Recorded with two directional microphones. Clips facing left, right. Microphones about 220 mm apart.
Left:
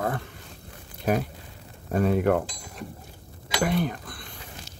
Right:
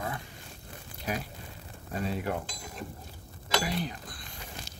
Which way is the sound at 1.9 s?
55° left (ahead or behind).